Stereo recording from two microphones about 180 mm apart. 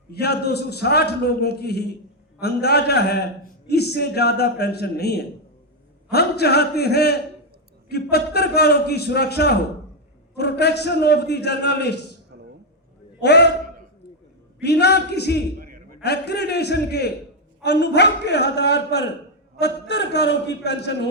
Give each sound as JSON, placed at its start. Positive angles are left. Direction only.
{"t": 0.1, "sound": "a man's voice", "side_deg": 65}
{"t": 13.2, "sound": "a man's voice", "side_deg": 70}
{"t": 14.6, "sound": "a man's voice", "side_deg": 65}
{"t": 15.5, "sound": "a sound", "side_deg": -55}
{"t": 16.0, "sound": "a man's voice", "side_deg": 65}